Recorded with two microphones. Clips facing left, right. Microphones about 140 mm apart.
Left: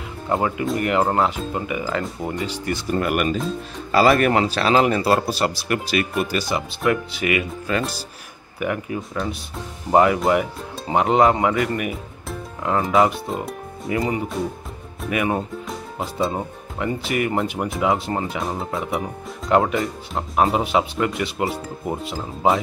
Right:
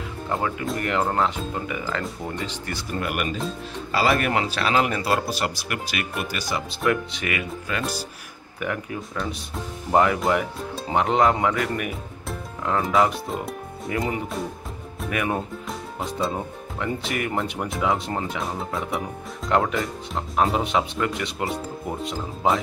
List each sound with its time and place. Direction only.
0.3 s speech: 25° left (ahead or behind)
3.0 s a man's voice: 50° left (ahead or behind); by 6.6 s 30° left (ahead or behind)
6.8 s speech: 5° left (ahead or behind)
7.7 s a man's voice: 35° left (ahead or behind)
8.5 s speech: 5° left (ahead or behind)